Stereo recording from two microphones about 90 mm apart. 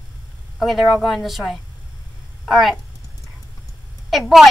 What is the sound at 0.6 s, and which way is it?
Speech, centre (ahead or behind).